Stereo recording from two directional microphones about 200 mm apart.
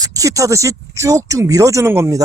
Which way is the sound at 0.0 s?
15° right (ahead or behind).